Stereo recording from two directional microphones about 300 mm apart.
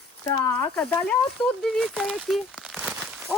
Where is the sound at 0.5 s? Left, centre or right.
Centre.